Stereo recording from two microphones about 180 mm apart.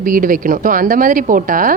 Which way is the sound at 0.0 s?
50° right (ahead or behind).